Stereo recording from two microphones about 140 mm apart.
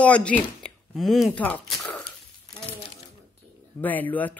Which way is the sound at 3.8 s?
10° left (ahead or behind).